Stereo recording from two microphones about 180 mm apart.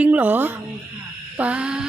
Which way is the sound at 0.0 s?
10° right (ahead or behind).